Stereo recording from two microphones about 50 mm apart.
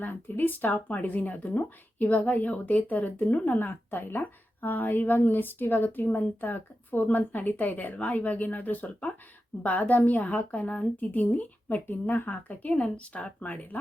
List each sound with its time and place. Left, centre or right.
0.0 s a woman's voice: left
3.4 s a woman's voice: left
12.8 s speech: left